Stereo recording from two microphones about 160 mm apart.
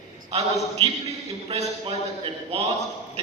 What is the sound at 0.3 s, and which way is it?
A man's voice, 40° right (ahead or behind).